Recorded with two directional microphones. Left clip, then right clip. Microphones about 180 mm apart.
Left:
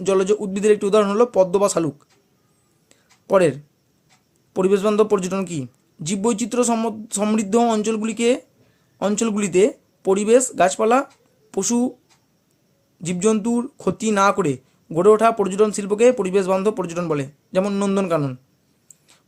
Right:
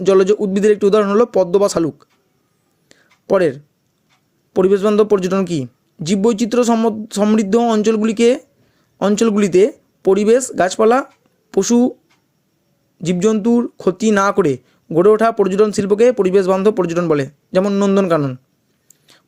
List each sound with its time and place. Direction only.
0.0 s speech: 25° right (ahead or behind)
2.9 s whispering: 30° right (ahead or behind)
4.5 s speech: 25° right (ahead or behind)
13.0 s speech: 25° right (ahead or behind)